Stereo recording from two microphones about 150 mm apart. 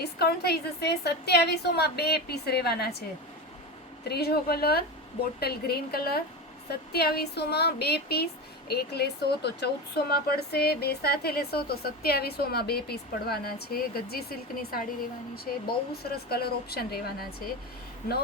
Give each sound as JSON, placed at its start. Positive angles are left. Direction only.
{"t": 0.0, "sound": "speech", "side_deg": 90}
{"t": 4.1, "sound": "speech", "side_deg": 90}
{"t": 15.5, "sound": "speech", "side_deg": 60}
{"t": 16.0, "sound": "speech", "side_deg": 90}